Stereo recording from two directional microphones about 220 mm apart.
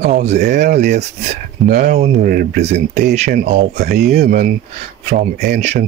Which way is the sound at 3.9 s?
45° right (ahead or behind).